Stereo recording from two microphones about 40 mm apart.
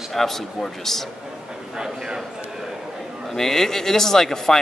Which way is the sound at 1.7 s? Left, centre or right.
Centre.